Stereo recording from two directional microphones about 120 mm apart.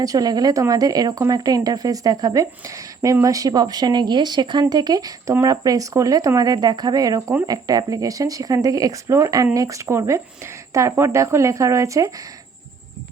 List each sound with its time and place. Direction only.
0.0 s speech: 30° right (ahead or behind)